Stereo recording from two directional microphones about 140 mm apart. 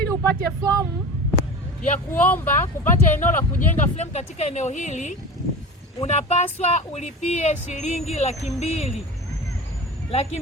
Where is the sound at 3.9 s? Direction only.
55° left (ahead or behind).